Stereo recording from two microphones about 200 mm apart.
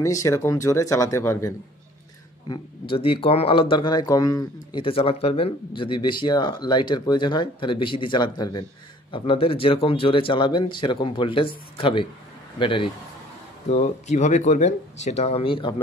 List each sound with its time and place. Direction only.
0.0 s speech: 15° left (ahead or behind)
2.4 s speech: 25° left (ahead or behind)